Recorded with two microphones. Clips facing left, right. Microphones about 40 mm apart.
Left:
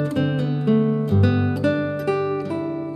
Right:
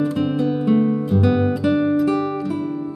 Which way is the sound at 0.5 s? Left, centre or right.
Centre.